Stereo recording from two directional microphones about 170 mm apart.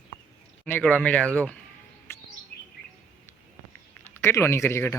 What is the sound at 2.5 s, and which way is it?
Chirp, 65° left (ahead or behind).